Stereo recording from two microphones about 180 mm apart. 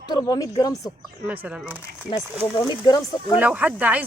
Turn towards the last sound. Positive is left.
turn(degrees=-10)  # may be behind; listen again after turning